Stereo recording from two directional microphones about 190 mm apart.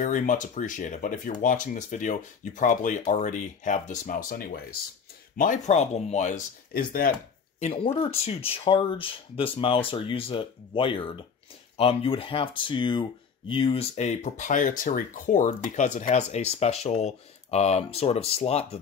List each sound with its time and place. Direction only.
0.0 s speech: 40° left (ahead or behind)
5.4 s speech: 40° left (ahead or behind)
7.6 s speech: 30° left (ahead or behind)